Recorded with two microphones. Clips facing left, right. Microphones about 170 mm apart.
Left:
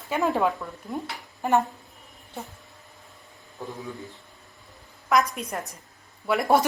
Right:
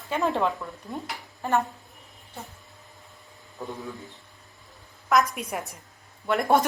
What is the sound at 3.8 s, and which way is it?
A woman's voice, centre (ahead or behind).